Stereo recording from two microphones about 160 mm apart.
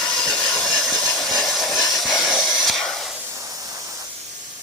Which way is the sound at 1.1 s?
Centre (ahead or behind).